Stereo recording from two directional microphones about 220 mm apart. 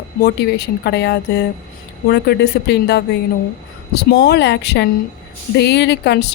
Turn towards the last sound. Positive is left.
turn(degrees=50)  # may be behind; listen again after turning